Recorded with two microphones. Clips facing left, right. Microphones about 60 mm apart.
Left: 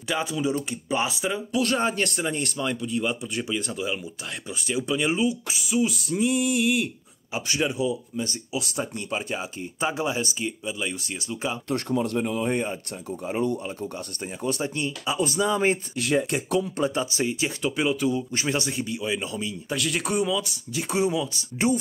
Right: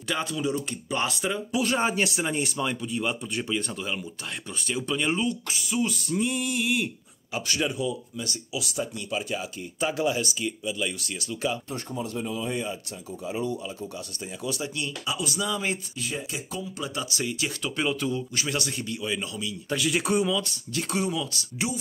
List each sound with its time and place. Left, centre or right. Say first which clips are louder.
0.1 s speech: left 2 dB; centre
1.5 s speech: left 1 dB; centre
7.3 s speech: left 2 dB; centre
8.2 s speech: left 3 dB; left
11.7 s speech: left 7 dB; left
16.0 s speech: left 9 dB; left
16.7 s speech: left 6 dB; left
17.7 s speech: left 3 dB; centre
18.3 s speech: left 3 dB; left
19.7 s speech: right 2 dB; centre
20.9 s speech: left 5 dB; centre